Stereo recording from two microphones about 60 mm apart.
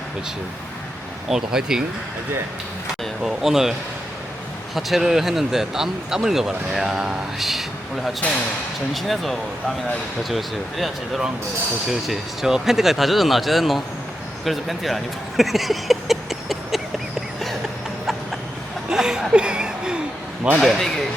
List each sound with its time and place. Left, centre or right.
1.3 s speech: centre
3.0 s speech: centre
8.2 s speech: left
8.9 s speech: centre
14.4 s a sound: centre
18.9 s a sound: centre
20.6 s speech: centre